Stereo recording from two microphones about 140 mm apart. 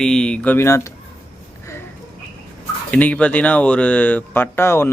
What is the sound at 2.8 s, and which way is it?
Speech, 10° left (ahead or behind).